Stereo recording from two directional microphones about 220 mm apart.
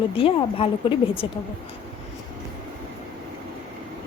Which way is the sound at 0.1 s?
25° left (ahead or behind).